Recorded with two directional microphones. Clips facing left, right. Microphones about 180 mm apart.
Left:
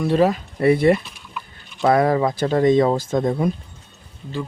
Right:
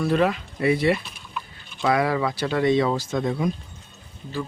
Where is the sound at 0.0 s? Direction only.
30° left (ahead or behind).